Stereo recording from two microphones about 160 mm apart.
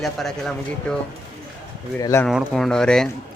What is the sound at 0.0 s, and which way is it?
Speech, centre (ahead or behind).